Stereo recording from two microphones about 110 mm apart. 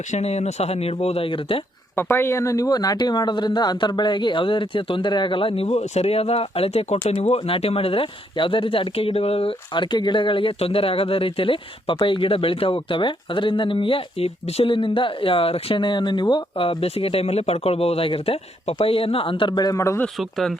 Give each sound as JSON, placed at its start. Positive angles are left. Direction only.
{"t": 0.1, "sound": "speech", "side_deg": 85}
{"t": 2.0, "sound": "speech", "side_deg": 20}
{"t": 5.6, "sound": "speech", "side_deg": 90}
{"t": 20.1, "sound": "speech", "side_deg": 0}